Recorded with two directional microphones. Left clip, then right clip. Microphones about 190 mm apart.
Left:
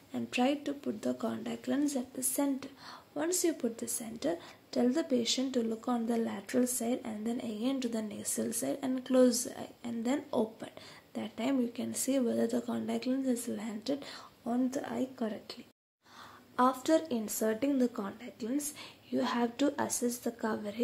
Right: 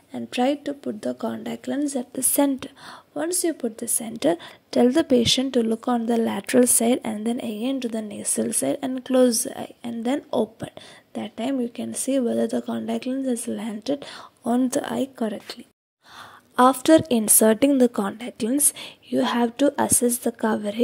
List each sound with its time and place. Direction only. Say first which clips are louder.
0.1 s a woman's voice: right 8 dB; 30° right (ahead or behind)
2.3 s a woman's voice: right 12 dB; 45° right (ahead or behind)
16.5 s speech: right 12 dB; 45° right (ahead or behind)